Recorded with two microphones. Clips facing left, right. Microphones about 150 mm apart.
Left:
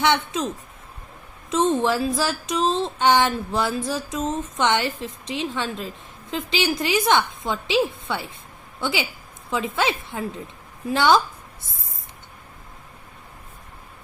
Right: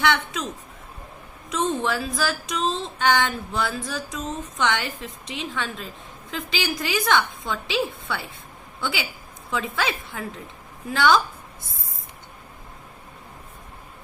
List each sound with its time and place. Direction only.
0.0 s speech: 25° left (ahead or behind)
1.5 s speech: 25° left (ahead or behind)